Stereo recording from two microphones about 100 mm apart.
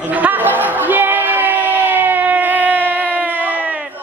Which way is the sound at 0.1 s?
15° right (ahead or behind).